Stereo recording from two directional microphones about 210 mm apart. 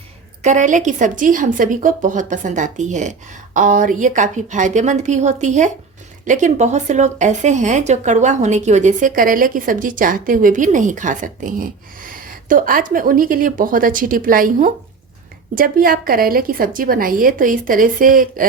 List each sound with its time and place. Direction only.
0.4 s a woman's voice: 35° right (ahead or behind)